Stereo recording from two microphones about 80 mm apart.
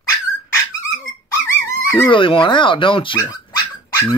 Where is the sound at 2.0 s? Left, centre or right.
Left.